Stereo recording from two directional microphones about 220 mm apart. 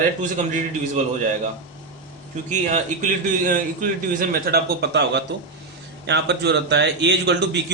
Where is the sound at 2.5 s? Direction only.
35° right (ahead or behind); by 7.6 s 50° right (ahead or behind).